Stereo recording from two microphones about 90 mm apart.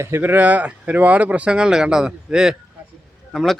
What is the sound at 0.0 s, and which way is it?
Speech, 25° right (ahead or behind).